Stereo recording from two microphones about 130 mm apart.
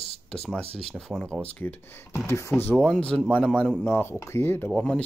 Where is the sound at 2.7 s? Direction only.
10° left (ahead or behind).